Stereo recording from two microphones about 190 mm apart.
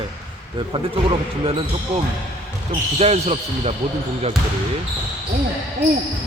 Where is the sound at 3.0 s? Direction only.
35° right (ahead or behind).